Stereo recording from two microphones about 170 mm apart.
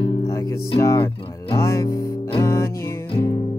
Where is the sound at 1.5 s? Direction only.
15° left (ahead or behind).